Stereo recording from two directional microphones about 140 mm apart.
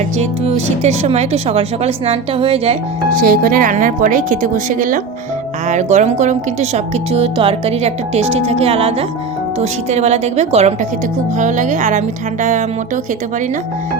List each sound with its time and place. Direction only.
0.4 s speech: 50° right (ahead or behind)
3.2 s a woman's voice: 90° right; by 4.9 s 70° right (ahead or behind)
5.6 s speech: 55° right (ahead or behind)
11.3 s music: 60° right (ahead or behind)